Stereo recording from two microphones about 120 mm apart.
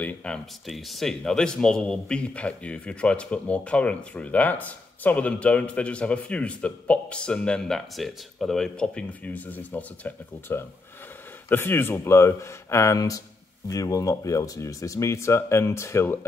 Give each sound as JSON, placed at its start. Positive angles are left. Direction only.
{"t": 0.0, "sound": "speech", "side_deg": 5}